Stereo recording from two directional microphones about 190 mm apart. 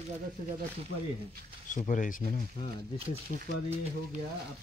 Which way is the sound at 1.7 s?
40° left (ahead or behind).